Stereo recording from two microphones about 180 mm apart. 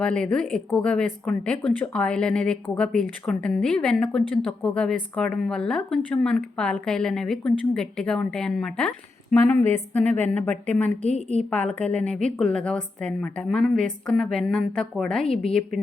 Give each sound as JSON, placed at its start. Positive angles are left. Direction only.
{"t": 0.0, "sound": "a woman's voice", "side_deg": 5}
{"t": 11.0, "sound": "a woman's voice", "side_deg": 35}
{"t": 11.5, "sound": "a woman's voice", "side_deg": 10}